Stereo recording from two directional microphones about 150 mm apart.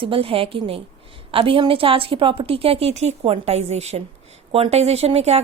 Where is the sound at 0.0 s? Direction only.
35° right (ahead or behind).